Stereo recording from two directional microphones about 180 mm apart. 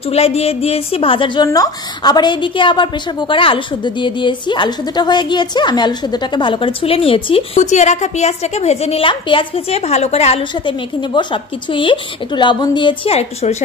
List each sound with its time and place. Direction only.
0.1 s a woman's voice: 35° left (ahead or behind)
11.7 s a woman's voice: 25° left (ahead or behind)